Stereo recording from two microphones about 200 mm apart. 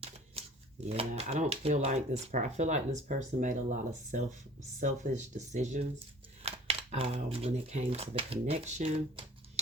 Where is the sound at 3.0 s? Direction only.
40° right (ahead or behind).